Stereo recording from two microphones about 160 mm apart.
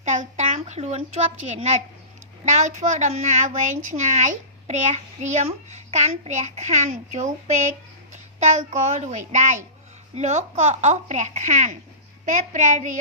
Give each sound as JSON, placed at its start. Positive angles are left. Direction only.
{"t": 0.0, "sound": "a woman's voice", "side_deg": -50}